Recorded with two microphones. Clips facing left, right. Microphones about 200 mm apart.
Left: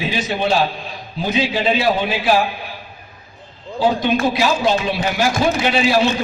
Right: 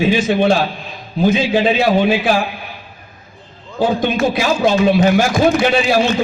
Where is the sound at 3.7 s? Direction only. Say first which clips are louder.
Right 1 dB; 50° right (ahead or behind).